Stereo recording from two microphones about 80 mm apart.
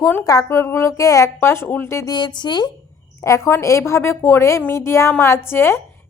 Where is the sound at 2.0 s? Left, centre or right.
Left.